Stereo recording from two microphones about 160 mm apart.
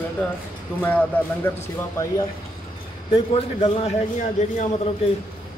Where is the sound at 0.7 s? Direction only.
10° left (ahead or behind).